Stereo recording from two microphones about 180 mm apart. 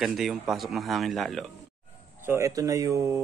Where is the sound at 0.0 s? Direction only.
Centre (ahead or behind).